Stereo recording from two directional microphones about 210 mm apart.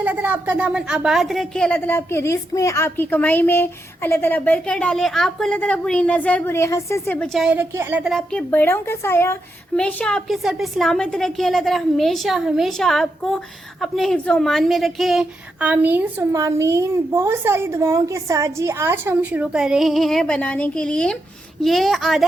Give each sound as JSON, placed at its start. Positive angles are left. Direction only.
{"t": 0.0, "sound": "a woman's voice", "side_deg": -10}